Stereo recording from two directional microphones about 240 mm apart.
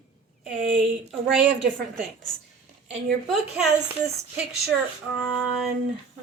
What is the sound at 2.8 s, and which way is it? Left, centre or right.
Speech, centre.